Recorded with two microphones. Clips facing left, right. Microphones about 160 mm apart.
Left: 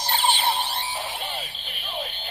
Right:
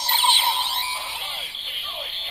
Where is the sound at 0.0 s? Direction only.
45° left (ahead or behind).